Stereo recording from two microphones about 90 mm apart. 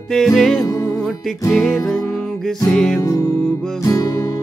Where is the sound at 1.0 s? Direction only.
Centre (ahead or behind).